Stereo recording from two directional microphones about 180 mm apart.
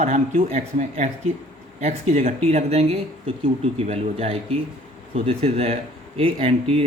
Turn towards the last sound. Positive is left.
turn(degrees=-30)  # may be behind; listen again after turning